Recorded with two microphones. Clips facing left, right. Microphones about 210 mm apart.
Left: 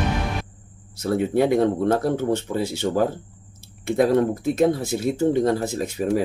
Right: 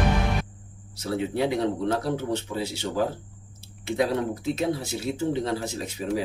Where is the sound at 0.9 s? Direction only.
50° left (ahead or behind).